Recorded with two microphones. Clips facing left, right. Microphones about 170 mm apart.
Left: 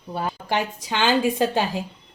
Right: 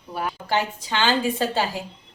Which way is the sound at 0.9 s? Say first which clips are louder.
Left 2 dB; 15° left (ahead or behind).